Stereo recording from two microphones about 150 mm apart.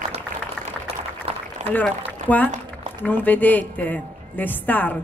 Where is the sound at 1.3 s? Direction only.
40° right (ahead or behind).